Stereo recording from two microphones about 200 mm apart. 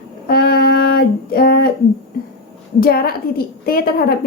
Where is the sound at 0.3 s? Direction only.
50° left (ahead or behind).